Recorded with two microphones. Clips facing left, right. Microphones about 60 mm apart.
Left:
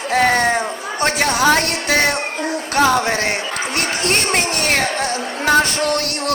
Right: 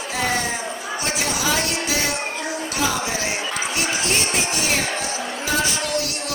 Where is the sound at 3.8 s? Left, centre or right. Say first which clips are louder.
Left 5 dB; left.